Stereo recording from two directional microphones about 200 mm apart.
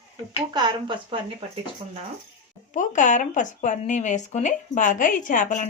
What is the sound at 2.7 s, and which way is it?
Speech, 40° left (ahead or behind).